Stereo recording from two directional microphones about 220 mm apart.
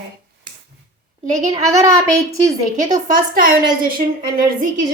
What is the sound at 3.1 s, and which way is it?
Speech, 40° right (ahead or behind).